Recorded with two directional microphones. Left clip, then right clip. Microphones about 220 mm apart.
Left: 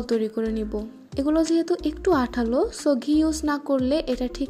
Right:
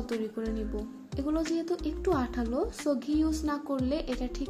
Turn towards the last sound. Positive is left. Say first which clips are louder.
# left 8 dB
turn(degrees=35)  # may be behind; listen again after turning